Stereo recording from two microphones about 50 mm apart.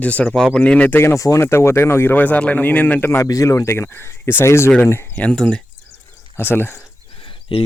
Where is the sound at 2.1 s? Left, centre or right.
Left.